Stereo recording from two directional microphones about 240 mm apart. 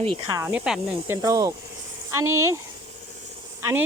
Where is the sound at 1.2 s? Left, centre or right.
Centre.